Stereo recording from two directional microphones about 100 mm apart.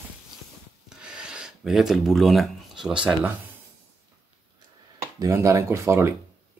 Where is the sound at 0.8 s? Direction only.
10° right (ahead or behind).